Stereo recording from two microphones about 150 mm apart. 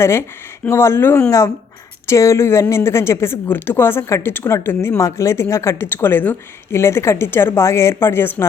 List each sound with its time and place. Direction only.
0.0 s a woman's voice: 15° left (ahead or behind)